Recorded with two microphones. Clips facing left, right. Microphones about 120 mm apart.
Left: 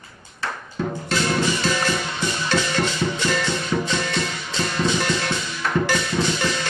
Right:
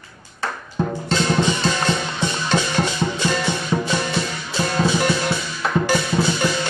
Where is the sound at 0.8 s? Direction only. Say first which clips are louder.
Right 3 dB; 35° right (ahead or behind).